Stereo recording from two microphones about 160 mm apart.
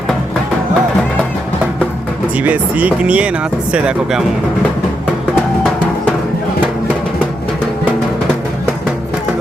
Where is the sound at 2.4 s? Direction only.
10° right (ahead or behind).